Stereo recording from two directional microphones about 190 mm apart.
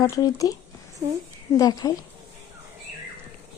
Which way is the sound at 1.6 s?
20° left (ahead or behind).